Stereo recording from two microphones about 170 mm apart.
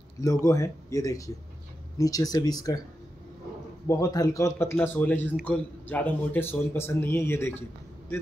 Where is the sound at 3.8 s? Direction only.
20° left (ahead or behind).